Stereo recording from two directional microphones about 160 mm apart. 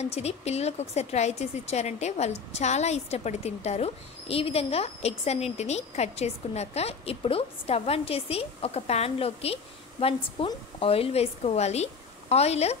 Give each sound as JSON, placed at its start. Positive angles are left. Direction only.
{"t": 0.0, "sound": "a woman's voice", "side_deg": 40}